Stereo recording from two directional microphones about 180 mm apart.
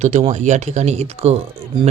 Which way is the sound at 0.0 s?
40° right (ahead or behind).